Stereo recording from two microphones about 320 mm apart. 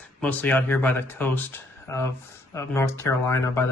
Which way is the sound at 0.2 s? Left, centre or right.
Centre.